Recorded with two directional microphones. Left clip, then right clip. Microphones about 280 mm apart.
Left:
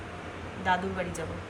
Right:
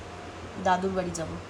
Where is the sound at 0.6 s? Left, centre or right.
Centre.